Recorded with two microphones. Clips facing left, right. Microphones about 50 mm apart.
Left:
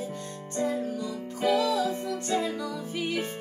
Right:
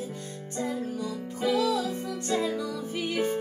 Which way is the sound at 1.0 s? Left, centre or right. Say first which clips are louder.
Left 1 dB; centre.